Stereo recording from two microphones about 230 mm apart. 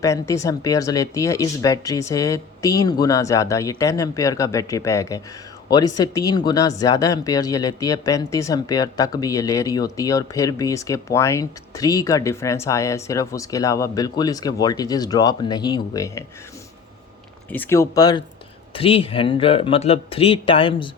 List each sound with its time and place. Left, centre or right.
0.0 s speech: centre
17.5 s speech: centre